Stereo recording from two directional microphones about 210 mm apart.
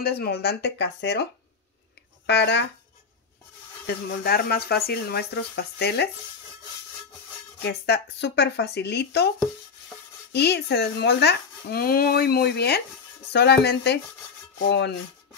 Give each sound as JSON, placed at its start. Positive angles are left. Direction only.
{"t": 0.0, "sound": "speech", "side_deg": 50}
{"t": 2.2, "sound": "speech", "side_deg": 50}
{"t": 3.8, "sound": "speech", "side_deg": 45}
{"t": 7.6, "sound": "speech", "side_deg": 55}
{"t": 10.3, "sound": "speech", "side_deg": 50}